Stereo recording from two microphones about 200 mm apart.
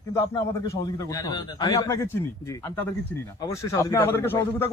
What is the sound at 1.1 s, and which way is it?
Speech, 20° left (ahead or behind).